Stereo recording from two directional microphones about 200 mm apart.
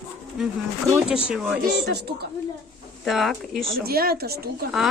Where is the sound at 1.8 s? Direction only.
55° right (ahead or behind).